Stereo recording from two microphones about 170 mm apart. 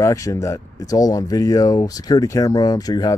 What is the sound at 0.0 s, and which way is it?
Speech, 20° left (ahead or behind).